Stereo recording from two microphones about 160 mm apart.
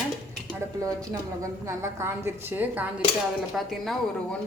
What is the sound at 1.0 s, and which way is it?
A woman's voice, 20° right (ahead or behind).